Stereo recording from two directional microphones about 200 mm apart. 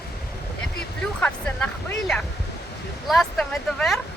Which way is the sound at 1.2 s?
5° left (ahead or behind).